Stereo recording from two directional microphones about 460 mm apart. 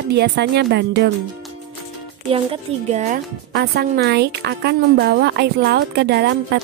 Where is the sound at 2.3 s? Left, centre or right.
Centre.